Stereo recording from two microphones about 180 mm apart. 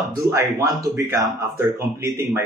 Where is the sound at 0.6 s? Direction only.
20° right (ahead or behind).